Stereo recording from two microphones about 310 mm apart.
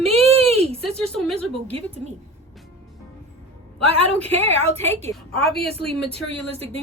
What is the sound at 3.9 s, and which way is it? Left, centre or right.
Speech, centre.